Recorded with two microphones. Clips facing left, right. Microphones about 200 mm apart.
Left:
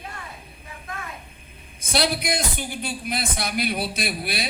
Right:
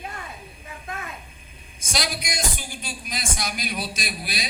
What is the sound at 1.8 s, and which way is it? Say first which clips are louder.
Speech: left 6 dB; 60° left (ahead or behind).